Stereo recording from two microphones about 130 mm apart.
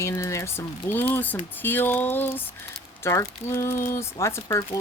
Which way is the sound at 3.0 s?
20° left (ahead or behind).